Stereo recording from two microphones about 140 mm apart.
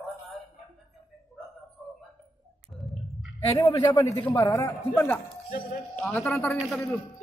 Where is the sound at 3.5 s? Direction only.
25° left (ahead or behind).